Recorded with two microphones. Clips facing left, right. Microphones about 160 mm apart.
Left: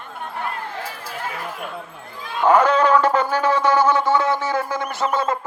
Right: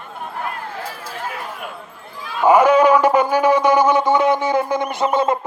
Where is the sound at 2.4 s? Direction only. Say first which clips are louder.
Right 4 dB; 10° right (ahead or behind).